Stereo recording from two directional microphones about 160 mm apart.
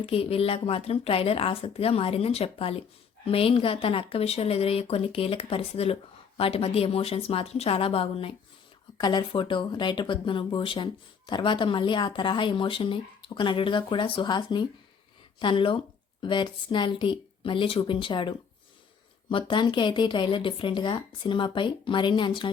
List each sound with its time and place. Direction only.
0.0 s speech: 35° left (ahead or behind)